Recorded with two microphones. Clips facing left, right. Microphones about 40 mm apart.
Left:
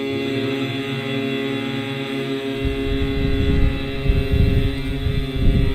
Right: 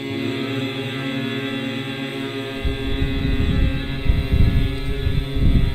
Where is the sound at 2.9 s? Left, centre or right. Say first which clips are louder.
Left 3 dB; centre.